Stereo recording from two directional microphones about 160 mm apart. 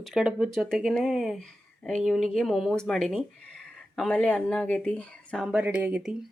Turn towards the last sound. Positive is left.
turn(degrees=-5)  # may be behind; listen again after turning